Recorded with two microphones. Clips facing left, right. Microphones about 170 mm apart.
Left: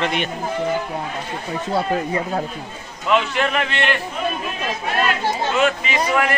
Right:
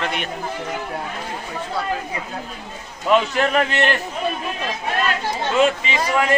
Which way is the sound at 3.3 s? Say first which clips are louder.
Right 2 dB; 40° right (ahead or behind).